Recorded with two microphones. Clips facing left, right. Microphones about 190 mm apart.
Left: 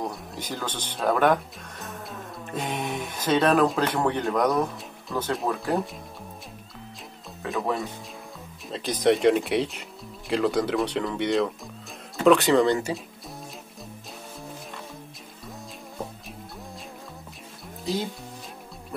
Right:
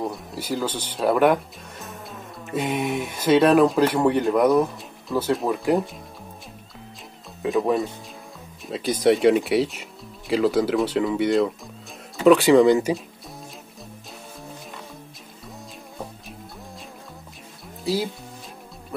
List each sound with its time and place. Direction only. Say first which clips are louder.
0.0 s speech: right 3 dB; 5° right (ahead or behind)
8.6 s speech: right 3 dB; 5° right (ahead or behind)
17.8 s speech: right 4 dB; 5° right (ahead or behind)